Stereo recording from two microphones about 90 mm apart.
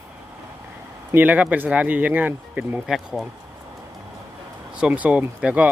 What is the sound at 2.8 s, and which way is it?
Speech, centre (ahead or behind).